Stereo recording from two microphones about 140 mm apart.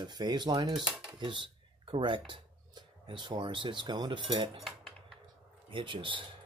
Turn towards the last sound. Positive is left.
turn(degrees=-35)  # may be behind; listen again after turning